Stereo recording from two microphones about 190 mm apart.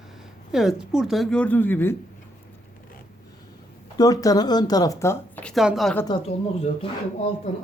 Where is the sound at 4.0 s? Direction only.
20° left (ahead or behind); by 5.9 s centre (ahead or behind).